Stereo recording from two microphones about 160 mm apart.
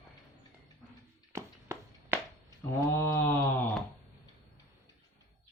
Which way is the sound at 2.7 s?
15° left (ahead or behind).